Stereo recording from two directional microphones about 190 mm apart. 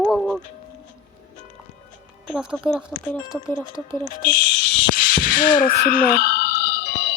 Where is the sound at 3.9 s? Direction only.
45° left (ahead or behind).